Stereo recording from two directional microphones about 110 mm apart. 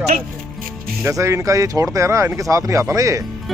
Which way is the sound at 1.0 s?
25° right (ahead or behind).